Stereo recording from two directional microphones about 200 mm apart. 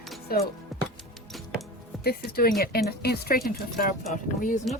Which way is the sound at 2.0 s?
50° left (ahead or behind).